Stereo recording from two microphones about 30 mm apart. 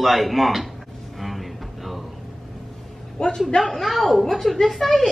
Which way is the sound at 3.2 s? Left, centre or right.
Left.